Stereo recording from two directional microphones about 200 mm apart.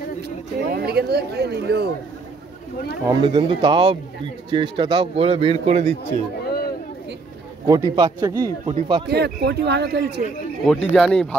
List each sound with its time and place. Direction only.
0.7 s speech: 50° right (ahead or behind)
3.1 s a man's voice: 25° right (ahead or behind)
6.4 s a sound: 50° left (ahead or behind)
7.6 s speech: 20° right (ahead or behind)
8.6 s a man's voice: 25° right (ahead or behind)
9.0 s a man's voice: 55° right (ahead or behind)
10.6 s speech: 5° left (ahead or behind)